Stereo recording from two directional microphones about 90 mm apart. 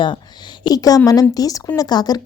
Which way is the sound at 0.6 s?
45° left (ahead or behind).